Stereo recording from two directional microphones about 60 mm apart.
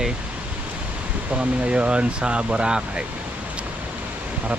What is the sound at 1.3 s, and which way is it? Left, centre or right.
Speech, centre.